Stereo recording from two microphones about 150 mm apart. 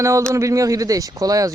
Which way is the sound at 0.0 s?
20° right (ahead or behind).